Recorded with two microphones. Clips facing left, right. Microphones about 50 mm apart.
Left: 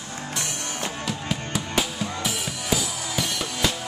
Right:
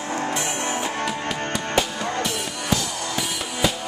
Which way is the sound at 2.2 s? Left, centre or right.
Centre.